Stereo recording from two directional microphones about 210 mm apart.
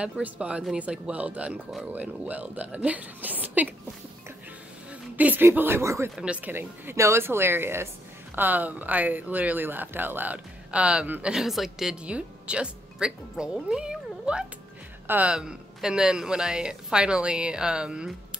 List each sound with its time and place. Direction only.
0.0 s speech: 5° right (ahead or behind)
5.1 s speech: 10° right (ahead or behind)